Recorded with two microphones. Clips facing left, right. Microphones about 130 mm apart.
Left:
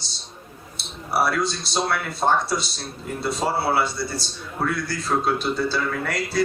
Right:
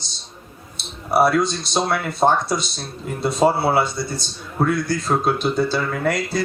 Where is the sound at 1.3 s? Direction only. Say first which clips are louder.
Right 5 dB; 20° right (ahead or behind).